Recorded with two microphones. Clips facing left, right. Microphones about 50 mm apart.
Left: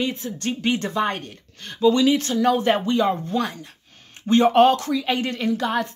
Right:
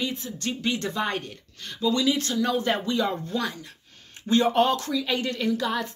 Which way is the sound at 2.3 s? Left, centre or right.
Left.